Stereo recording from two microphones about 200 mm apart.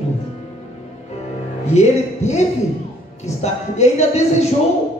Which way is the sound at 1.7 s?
35° left (ahead or behind).